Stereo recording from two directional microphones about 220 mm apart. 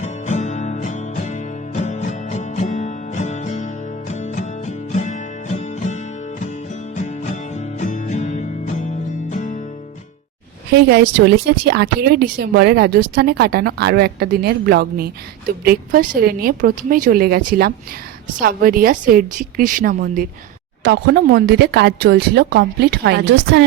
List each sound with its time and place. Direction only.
0.0 s music: 35° left (ahead or behind)
10.7 s a woman's voice: 50° right (ahead or behind)